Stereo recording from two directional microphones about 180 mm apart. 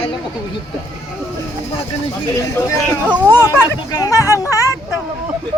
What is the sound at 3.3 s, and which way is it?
Speech, 15° left (ahead or behind).